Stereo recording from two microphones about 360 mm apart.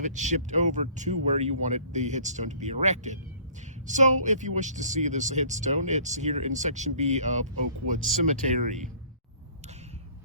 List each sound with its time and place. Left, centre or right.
0.0 s speech: centre